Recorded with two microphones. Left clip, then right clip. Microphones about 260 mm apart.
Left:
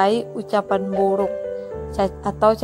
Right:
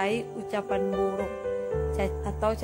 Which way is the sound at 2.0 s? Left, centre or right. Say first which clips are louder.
Left 10 dB; centre.